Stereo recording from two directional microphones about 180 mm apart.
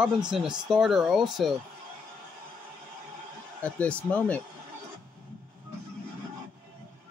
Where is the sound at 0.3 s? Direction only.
5° right (ahead or behind).